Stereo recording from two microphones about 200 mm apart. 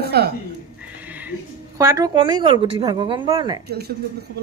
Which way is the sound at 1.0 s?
10° right (ahead or behind).